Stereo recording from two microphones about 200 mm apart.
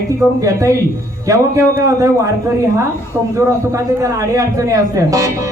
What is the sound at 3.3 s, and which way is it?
A man's voice, 15° right (ahead or behind).